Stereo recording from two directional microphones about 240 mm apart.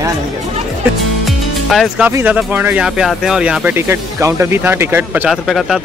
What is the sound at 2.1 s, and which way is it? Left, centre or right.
Speech, centre.